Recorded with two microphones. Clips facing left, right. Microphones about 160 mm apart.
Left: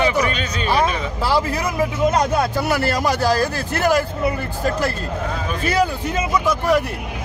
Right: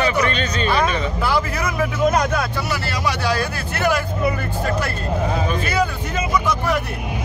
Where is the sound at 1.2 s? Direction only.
30° left (ahead or behind).